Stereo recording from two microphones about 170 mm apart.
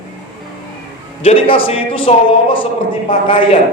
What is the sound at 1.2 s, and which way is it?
Speech, 35° left (ahead or behind).